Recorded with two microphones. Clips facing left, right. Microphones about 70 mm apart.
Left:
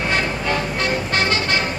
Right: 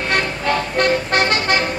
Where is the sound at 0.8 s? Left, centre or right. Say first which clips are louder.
Right 4 dB; right.